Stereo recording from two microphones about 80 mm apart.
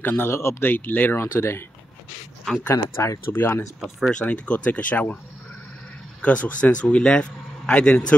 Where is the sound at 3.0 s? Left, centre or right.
Left.